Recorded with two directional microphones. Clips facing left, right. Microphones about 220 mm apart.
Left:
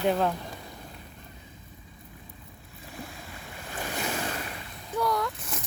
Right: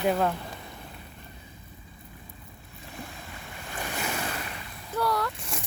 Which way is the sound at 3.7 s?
35° left (ahead or behind).